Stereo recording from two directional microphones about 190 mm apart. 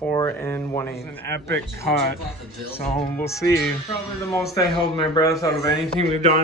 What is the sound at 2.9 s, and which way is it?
A man's voice, 10° left (ahead or behind).